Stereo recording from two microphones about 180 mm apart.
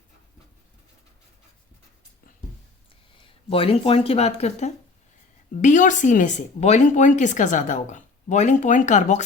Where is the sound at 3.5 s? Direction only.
30° left (ahead or behind).